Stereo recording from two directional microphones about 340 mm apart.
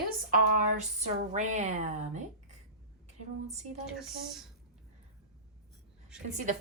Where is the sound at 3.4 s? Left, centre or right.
Centre.